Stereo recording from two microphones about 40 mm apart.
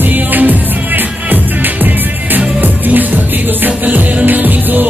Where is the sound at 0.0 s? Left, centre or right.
Right.